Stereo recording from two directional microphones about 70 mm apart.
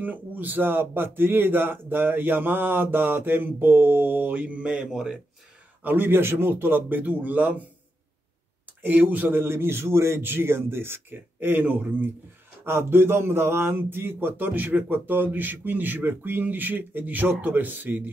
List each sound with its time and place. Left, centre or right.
0.0 s speech: right
5.9 s speech: right
8.8 s a man's voice: right